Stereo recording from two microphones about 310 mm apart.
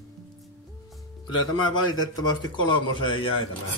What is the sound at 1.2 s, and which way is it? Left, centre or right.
Speech, left.